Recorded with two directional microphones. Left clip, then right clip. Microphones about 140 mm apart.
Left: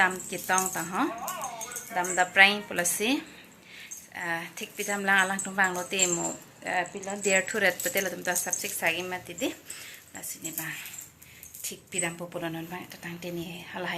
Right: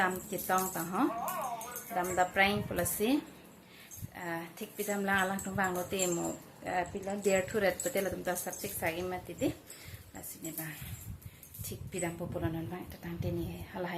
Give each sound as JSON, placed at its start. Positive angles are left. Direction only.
{"t": 0.0, "sound": "speech", "side_deg": 0}
{"t": 11.9, "sound": "speech", "side_deg": -5}